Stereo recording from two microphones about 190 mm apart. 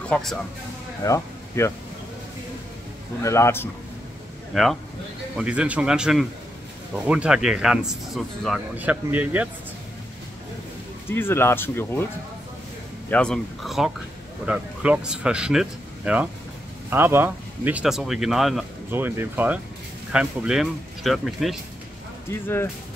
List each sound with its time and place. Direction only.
0.1 s speech: centre (ahead or behind)
1.0 s speech: 15° left (ahead or behind)
3.2 s speech: 15° left (ahead or behind)
4.5 s speech: centre (ahead or behind)
11.1 s speech: 10° left (ahead or behind)
13.1 s speech: 5° left (ahead or behind)
22.3 s speech: 10° left (ahead or behind)